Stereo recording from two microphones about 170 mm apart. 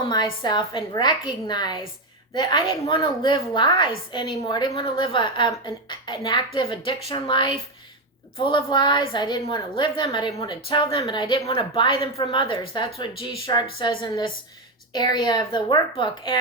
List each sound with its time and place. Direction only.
0.0 s a woman's voice: 25° left (ahead or behind)